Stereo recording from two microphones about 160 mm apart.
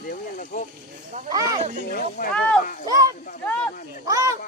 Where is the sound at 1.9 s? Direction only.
65° left (ahead or behind).